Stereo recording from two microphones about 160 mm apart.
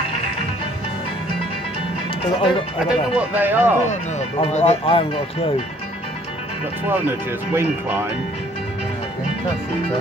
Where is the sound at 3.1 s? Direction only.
10° right (ahead or behind).